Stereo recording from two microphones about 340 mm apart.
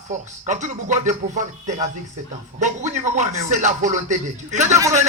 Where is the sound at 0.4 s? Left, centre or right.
Right.